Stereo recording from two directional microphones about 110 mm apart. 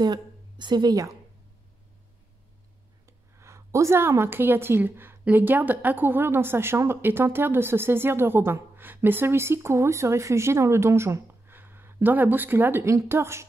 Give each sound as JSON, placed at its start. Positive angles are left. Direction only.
{"t": 0.0, "sound": "a woman's voice", "side_deg": -40}
{"t": 3.1, "sound": "a woman's voice", "side_deg": -25}